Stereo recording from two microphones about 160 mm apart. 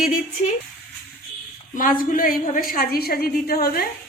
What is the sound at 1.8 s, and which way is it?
A woman's voice, 60° left (ahead or behind).